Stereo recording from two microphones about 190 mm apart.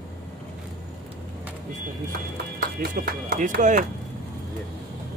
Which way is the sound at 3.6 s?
40° right (ahead or behind).